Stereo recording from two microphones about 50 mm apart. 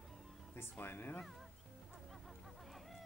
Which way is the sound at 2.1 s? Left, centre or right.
Centre.